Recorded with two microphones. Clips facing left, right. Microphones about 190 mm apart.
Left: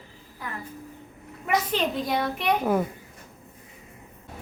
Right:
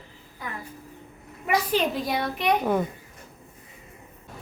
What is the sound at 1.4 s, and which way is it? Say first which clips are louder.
A child's voice: right 1 dB; centre (ahead or behind).